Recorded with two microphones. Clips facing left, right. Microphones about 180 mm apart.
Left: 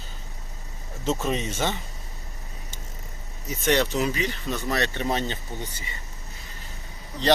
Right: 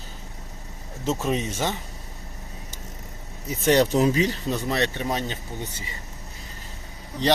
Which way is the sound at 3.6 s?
35° right (ahead or behind).